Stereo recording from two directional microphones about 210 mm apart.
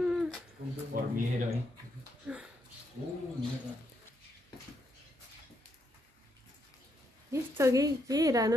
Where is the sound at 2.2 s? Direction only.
5° right (ahead or behind).